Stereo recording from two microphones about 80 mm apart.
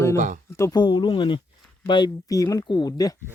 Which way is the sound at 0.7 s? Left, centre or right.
Left.